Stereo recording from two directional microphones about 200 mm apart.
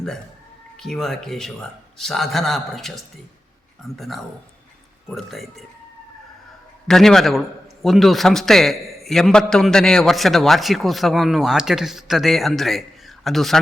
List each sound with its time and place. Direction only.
0.8 s a man's voice: centre (ahead or behind)
6.8 s a man's voice: centre (ahead or behind)